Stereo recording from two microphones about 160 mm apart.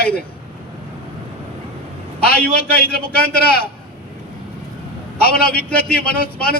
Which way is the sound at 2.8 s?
70° left (ahead or behind).